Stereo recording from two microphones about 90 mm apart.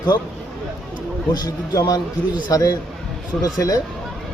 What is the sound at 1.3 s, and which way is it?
A man's voice, 45° left (ahead or behind).